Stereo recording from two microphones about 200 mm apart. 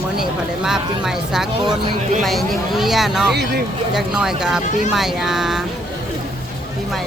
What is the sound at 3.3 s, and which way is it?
Speech, 55° right (ahead or behind).